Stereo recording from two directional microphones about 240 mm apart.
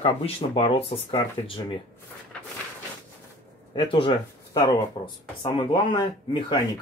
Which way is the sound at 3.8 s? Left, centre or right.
Left.